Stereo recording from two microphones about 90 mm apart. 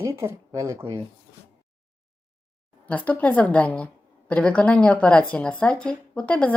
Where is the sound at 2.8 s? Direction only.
15° left (ahead or behind).